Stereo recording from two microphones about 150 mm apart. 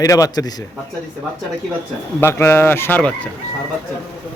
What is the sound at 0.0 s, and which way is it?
Speech, 25° left (ahead or behind).